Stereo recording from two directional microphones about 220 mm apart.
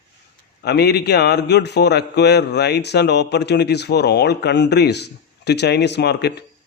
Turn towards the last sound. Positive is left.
turn(degrees=50)  # may be behind; listen again after turning